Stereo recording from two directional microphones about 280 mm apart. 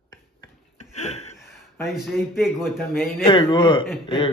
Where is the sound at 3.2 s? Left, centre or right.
Centre.